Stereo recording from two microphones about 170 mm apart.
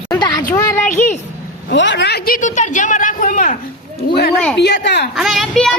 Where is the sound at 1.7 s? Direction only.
90° left; by 3.6 s 50° left (ahead or behind).